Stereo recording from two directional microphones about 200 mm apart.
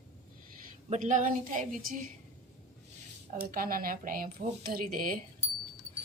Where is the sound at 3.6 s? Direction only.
45° right (ahead or behind).